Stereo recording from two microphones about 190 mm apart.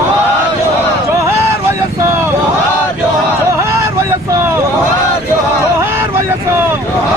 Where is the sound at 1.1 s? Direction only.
15° right (ahead or behind).